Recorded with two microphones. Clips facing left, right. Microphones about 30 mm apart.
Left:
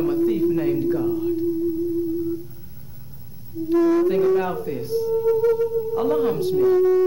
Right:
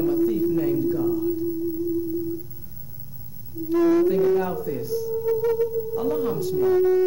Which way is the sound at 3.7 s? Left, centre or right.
Left.